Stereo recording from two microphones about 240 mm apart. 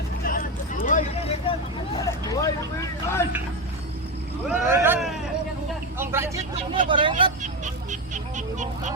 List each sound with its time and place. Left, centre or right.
0.3 s vehicle: left
2.0 s vehicle: centre
3.2 s speech: centre
4.4 s speech: centre
6.0 s vehicle: centre
6.8 s speech: right